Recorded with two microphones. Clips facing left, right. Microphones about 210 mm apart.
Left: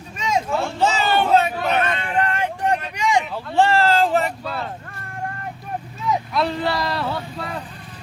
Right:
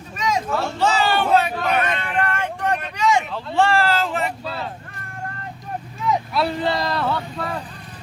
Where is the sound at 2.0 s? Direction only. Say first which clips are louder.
Left 1 dB; 20° left (ahead or behind).